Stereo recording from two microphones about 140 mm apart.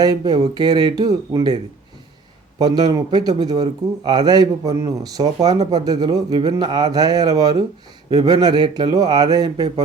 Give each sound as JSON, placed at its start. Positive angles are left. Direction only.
{"t": 0.0, "sound": "speech", "side_deg": -30}
{"t": 2.6, "sound": "speech", "side_deg": -30}